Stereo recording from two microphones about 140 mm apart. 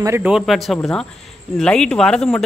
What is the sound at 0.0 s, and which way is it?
Speech, 20° right (ahead or behind).